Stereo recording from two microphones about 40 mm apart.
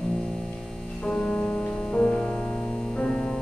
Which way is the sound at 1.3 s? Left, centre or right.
Left.